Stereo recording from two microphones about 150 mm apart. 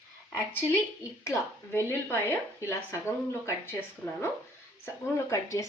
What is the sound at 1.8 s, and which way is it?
Speech, 15° left (ahead or behind).